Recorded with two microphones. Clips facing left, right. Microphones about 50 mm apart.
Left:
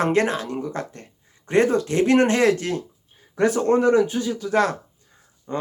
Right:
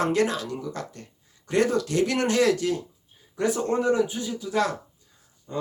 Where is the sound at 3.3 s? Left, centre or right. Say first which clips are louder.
Left 6 dB; left.